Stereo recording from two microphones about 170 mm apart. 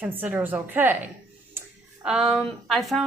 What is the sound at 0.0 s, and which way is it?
A woman's voice, 10° right (ahead or behind).